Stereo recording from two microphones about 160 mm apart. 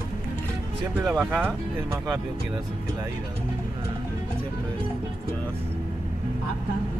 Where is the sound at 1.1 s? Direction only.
15° right (ahead or behind).